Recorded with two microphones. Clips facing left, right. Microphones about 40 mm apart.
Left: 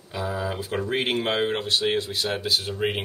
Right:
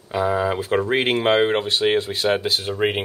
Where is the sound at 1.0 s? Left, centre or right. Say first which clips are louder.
Right 5 dB; centre.